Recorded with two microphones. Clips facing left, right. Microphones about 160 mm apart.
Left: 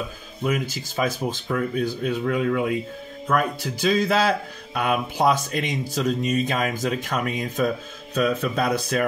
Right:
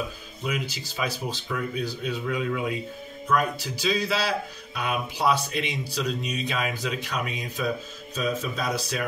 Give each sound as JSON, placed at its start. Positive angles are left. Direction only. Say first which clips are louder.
{"t": 0.4, "sound": "speech", "louder": "left 6 dB", "side_deg": 50}
{"t": 8.1, "sound": "a man's voice", "louder": "left 6 dB", "side_deg": 65}